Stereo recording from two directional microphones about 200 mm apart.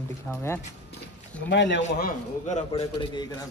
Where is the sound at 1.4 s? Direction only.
60° left (ahead or behind).